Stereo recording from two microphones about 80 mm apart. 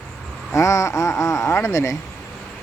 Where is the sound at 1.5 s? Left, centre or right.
Left.